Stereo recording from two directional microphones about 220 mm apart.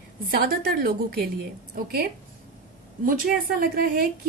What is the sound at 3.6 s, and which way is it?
Speech, 40° right (ahead or behind).